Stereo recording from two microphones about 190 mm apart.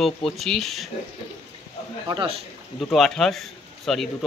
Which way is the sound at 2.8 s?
Centre (ahead or behind).